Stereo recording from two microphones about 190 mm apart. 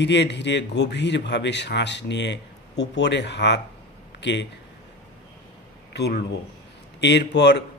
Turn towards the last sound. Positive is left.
turn(degrees=65)  # may be behind; listen again after turning